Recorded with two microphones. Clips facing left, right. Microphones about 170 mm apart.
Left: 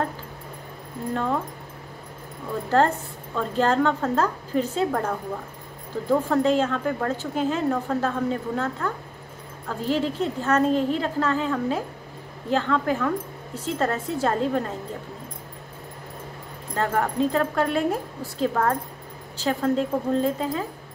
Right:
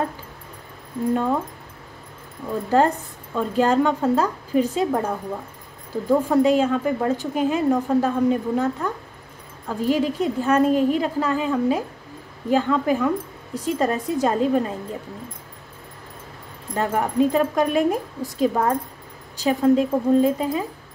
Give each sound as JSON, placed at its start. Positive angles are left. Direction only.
{"t": 1.1, "sound": "speech", "side_deg": -10}
{"t": 3.3, "sound": "speech", "side_deg": -10}
{"t": 16.7, "sound": "speech", "side_deg": -15}